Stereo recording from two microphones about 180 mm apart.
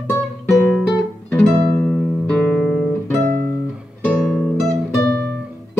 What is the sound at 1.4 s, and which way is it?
Music, 5° left (ahead or behind).